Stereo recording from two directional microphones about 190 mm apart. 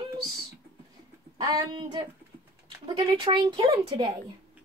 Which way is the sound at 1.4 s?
20° right (ahead or behind).